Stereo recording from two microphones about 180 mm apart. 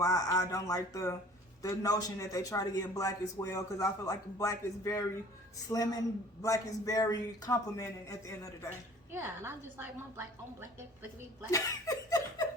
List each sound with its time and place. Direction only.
0.0 s a man's voice: 20° left (ahead or behind)
9.1 s a woman's voice: 10° right (ahead or behind)
11.5 s laughter: 20° left (ahead or behind)